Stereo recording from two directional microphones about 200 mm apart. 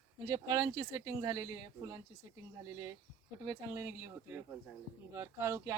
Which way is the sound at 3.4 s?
15° right (ahead or behind).